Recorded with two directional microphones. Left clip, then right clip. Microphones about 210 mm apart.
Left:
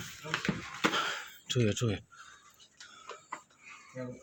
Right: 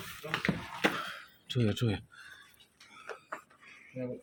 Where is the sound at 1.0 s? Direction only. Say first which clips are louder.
Left 6 dB; 30° left (ahead or behind).